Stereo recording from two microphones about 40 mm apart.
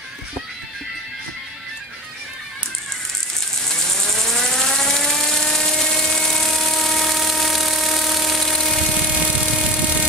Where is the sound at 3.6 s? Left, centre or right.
Centre.